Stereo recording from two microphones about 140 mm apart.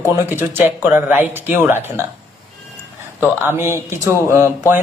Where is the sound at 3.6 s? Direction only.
20° right (ahead or behind).